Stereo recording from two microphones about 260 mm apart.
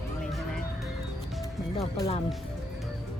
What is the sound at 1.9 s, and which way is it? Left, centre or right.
Speech, left.